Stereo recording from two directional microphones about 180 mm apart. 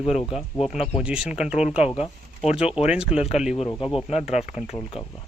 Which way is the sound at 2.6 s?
35° left (ahead or behind).